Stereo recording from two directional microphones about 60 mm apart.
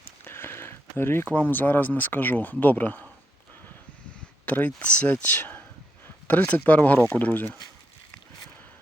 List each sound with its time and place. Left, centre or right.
0.3 s a sound: left
1.3 s speech: left
4.4 s speech: left